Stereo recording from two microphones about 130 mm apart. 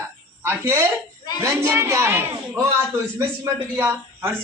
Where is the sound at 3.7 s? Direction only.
20° right (ahead or behind).